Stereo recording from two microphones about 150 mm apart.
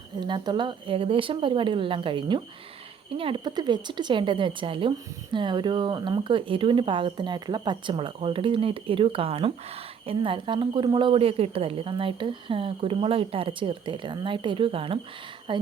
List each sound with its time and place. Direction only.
0.2 s a woman's voice: 30° right (ahead or behind)